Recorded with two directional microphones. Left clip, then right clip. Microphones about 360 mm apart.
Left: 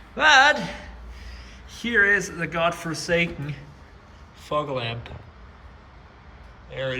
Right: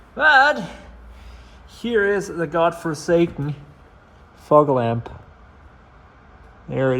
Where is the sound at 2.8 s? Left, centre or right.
Right.